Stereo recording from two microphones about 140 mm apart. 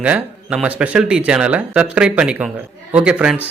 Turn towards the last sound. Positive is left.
turn(degrees=-5)  # may be behind; listen again after turning